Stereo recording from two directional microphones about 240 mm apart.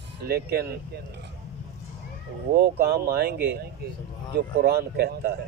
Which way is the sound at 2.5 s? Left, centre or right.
Right.